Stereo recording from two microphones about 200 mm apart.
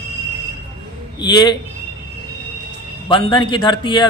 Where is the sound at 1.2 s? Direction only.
20° left (ahead or behind).